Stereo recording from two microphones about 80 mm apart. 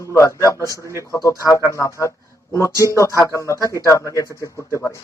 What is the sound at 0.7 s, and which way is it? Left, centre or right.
Speech, right.